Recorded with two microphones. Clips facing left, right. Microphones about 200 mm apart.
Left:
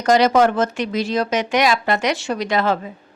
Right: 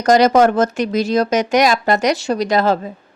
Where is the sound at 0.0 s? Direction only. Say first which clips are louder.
Right 3 dB; 40° right (ahead or behind).